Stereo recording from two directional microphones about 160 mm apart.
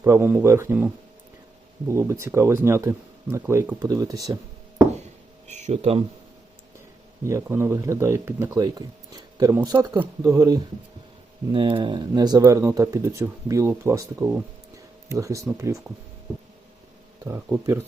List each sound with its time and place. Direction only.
0.0 s speech: 15° right (ahead or behind)
1.9 s speech: 15° right (ahead or behind)
5.5 s speech: 45° right (ahead or behind)
7.3 s speech: 15° right (ahead or behind)
11.5 s speech: 30° right (ahead or behind)
17.2 s speech: 20° right (ahead or behind)